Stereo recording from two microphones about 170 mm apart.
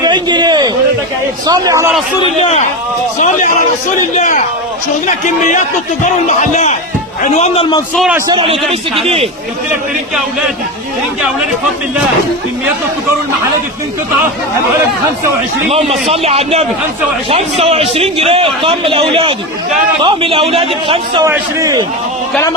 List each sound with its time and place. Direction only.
0.0 s a sound: 25° right (ahead or behind)
1.5 s a man's voice: 20° right (ahead or behind)
2.4 s a man's voice: 40° left (ahead or behind)
5.0 s a man's voice: 45° left (ahead or behind); by 7.9 s 30° left (ahead or behind)
8.3 s a man's voice: 30° right (ahead or behind)
16.2 s a man's voice: 35° right (ahead or behind)
21.2 s a man's voice: 20° right (ahead or behind)